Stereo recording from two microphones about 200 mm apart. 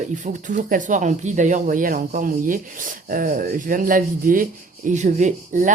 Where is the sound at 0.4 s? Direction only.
40° right (ahead or behind).